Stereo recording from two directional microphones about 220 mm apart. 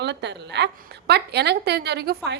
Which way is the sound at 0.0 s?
50° right (ahead or behind).